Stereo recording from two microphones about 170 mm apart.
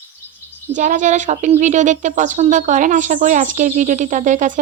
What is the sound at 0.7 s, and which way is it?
Speech, 50° right (ahead or behind).